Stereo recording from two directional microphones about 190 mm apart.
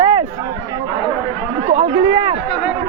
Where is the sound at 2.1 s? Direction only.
30° right (ahead or behind).